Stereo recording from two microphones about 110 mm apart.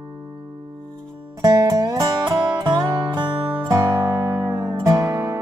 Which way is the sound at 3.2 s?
15° right (ahead or behind).